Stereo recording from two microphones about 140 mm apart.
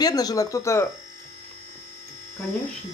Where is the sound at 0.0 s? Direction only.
25° left (ahead or behind).